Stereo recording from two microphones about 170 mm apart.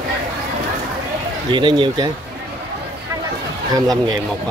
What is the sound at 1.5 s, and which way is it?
Speech, 30° right (ahead or behind).